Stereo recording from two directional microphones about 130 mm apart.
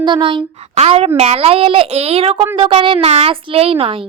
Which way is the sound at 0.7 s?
50° right (ahead or behind).